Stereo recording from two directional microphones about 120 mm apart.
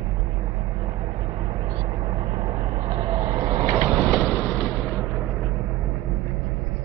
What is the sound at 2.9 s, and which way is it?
Vehicle, 60° right (ahead or behind).